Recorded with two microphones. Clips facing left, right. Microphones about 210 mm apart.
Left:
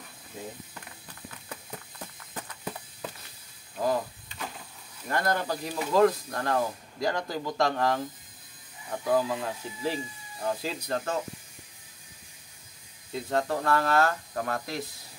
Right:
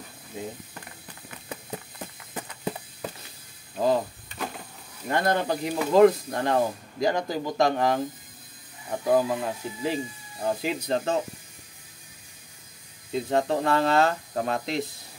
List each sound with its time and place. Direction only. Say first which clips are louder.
1.3 s a sound: right 7 dB; 20° right (ahead or behind)
3.7 s speech: right 4 dB; 25° right (ahead or behind)
5.0 s speech: right 4 dB; 25° right (ahead or behind)
13.1 s speech: right 4 dB; 20° right (ahead or behind)